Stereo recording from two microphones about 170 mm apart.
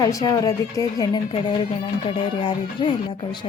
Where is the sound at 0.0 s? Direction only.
20° left (ahead or behind).